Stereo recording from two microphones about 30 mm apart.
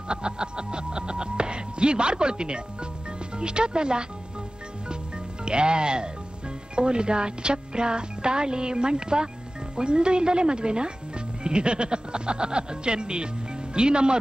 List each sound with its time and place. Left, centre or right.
0.1 s music: right
3.3 s speech: right
5.4 s speech: right